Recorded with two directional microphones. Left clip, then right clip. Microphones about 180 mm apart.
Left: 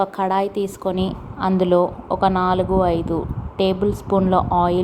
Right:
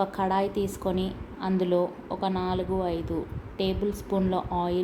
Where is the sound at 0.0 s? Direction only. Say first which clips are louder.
Left 6 dB; 25° left (ahead or behind).